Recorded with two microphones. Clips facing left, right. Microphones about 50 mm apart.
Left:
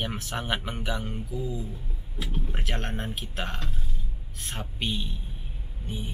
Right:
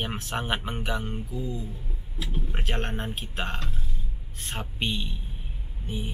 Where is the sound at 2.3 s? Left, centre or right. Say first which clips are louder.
Right 2 dB; right.